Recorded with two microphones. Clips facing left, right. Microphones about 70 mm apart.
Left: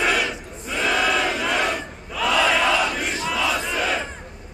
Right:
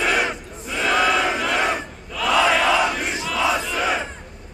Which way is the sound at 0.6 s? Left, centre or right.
Centre.